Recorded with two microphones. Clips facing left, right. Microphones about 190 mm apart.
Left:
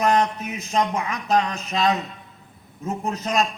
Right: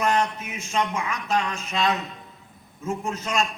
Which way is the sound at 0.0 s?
40° left (ahead or behind).